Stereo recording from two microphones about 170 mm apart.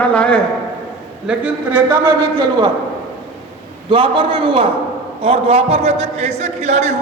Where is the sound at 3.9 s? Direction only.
30° right (ahead or behind).